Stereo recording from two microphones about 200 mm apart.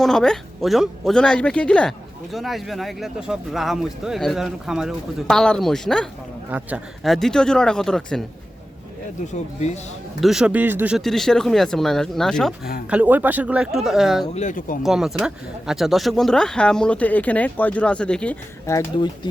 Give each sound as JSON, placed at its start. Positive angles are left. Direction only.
{"t": 0.0, "sound": "speech", "side_deg": 0}
{"t": 9.2, "sound": "speech", "side_deg": 35}
{"t": 10.2, "sound": "speech", "side_deg": 0}
{"t": 14.3, "sound": "speech", "side_deg": 40}
{"t": 14.8, "sound": "speech", "side_deg": 0}